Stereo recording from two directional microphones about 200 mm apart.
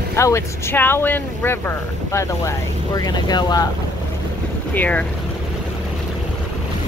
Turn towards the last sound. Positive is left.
turn(degrees=5)  # may be behind; listen again after turning